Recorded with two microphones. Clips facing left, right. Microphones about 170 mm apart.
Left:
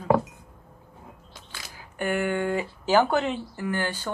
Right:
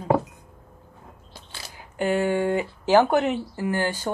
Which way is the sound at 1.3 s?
30° right (ahead or behind).